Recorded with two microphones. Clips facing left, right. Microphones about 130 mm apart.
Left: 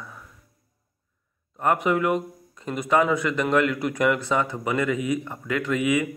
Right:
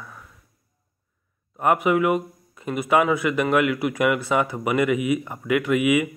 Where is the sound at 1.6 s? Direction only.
10° right (ahead or behind).